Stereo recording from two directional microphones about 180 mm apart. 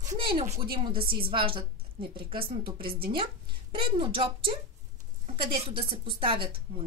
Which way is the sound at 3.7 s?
30° right (ahead or behind).